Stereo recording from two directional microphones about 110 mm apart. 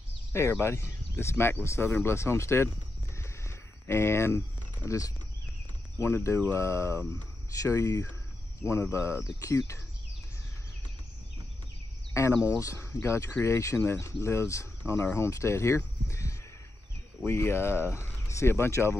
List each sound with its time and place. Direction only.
0.3 s speech: 20° left (ahead or behind)
3.2 s a sound: 20° left (ahead or behind)
4.8 s speech: 25° left (ahead or behind)
12.1 s speech: 25° left (ahead or behind)